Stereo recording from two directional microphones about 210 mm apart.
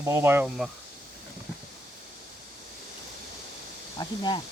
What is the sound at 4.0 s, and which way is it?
Speech, 20° left (ahead or behind).